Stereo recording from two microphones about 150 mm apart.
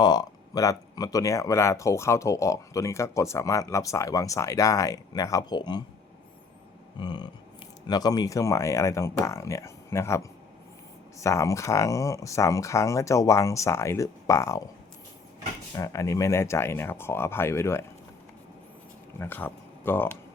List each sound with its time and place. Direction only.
0.0 s speech: 25° left (ahead or behind)
7.0 s speech: 30° left (ahead or behind)
15.7 s speech: 20° left (ahead or behind)
19.2 s speech: 15° left (ahead or behind)